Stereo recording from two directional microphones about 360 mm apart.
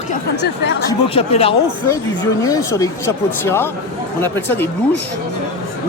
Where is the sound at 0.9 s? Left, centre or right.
Centre.